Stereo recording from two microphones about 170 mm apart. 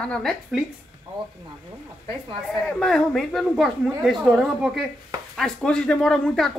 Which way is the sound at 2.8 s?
Centre (ahead or behind).